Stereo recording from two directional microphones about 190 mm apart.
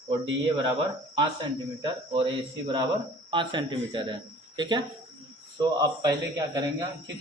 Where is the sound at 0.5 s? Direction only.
25° right (ahead or behind).